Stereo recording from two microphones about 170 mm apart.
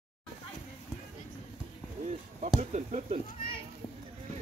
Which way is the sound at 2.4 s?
40° right (ahead or behind).